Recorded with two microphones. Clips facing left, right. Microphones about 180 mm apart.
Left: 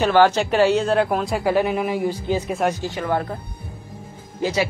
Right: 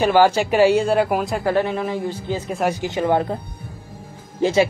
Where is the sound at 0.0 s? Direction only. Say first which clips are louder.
Right 1 dB; 10° right (ahead or behind); by 2.5 s 10° left (ahead or behind).